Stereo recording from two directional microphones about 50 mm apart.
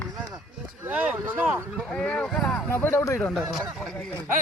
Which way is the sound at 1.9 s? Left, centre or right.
Left.